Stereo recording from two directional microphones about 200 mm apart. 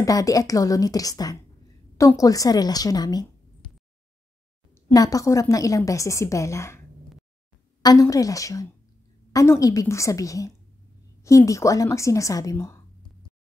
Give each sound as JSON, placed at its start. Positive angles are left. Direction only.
{"t": 0.0, "sound": "a woman's voice", "side_deg": 15}
{"t": 4.7, "sound": "a woman's voice", "side_deg": 15}
{"t": 7.8, "sound": "a woman's voice", "side_deg": 15}